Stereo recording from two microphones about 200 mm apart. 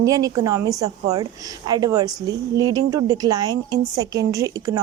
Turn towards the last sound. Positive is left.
turn(degrees=-15)  # may be behind; listen again after turning